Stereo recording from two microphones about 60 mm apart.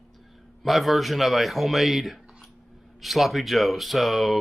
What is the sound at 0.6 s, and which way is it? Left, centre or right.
Speech, centre.